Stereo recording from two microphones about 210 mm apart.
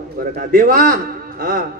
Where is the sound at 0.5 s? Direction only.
45° right (ahead or behind).